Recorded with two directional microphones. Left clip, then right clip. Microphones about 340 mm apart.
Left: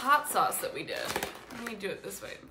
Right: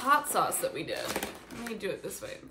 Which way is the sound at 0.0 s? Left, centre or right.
Centre.